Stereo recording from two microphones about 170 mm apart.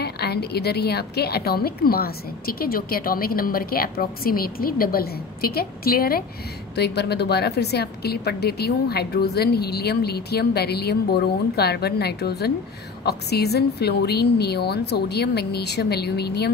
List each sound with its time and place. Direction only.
0.0 s a woman's voice: 70° left (ahead or behind)
6.7 s a woman's voice: 75° left (ahead or behind)